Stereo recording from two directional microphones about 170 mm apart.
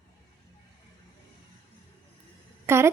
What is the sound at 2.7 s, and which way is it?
Speech, 15° right (ahead or behind).